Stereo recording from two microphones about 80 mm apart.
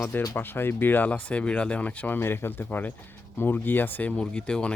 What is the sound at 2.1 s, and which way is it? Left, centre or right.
Speech, left.